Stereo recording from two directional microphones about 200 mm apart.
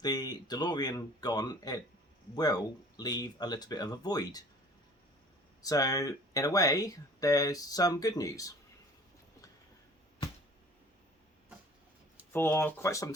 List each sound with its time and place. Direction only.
0.0 s speech: 20° left (ahead or behind)
5.6 s speech: 15° left (ahead or behind)
12.3 s speech: 10° left (ahead or behind)